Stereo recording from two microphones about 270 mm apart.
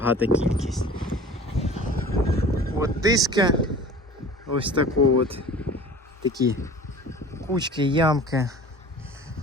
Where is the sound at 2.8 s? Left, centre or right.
Centre.